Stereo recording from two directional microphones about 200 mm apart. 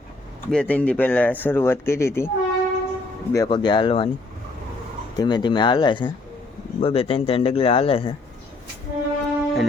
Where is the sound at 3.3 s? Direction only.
20° left (ahead or behind).